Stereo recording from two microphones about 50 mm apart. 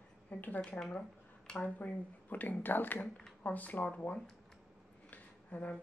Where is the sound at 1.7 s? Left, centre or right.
Left.